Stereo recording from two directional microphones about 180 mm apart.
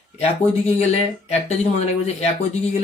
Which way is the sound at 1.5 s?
40° left (ahead or behind).